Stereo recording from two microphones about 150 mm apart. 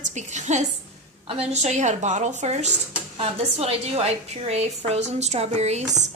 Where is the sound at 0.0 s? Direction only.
50° right (ahead or behind).